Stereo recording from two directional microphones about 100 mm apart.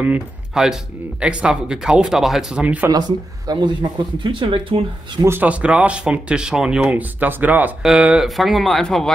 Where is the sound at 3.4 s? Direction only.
45° right (ahead or behind); by 5.2 s 60° right (ahead or behind).